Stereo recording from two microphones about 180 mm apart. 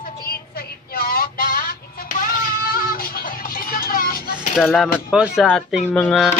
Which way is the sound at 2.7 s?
55° left (ahead or behind).